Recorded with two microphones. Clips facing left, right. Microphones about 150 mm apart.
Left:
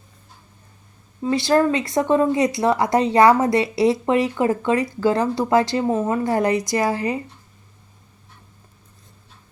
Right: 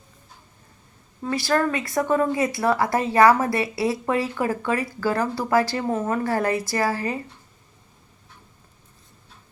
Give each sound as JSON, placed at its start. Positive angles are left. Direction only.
{"t": 1.2, "sound": "speech", "side_deg": 20}